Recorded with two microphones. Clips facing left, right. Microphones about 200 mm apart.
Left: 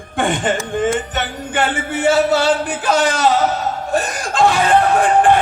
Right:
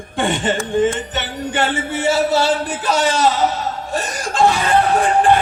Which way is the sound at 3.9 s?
55° left (ahead or behind).